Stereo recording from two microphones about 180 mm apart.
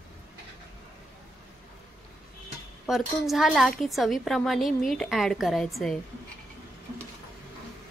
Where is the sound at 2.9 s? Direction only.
Centre (ahead or behind).